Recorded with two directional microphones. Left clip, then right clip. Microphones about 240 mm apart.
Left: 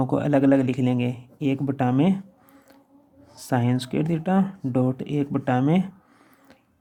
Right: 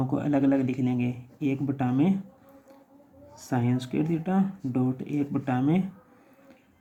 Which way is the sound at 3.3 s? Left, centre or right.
Left.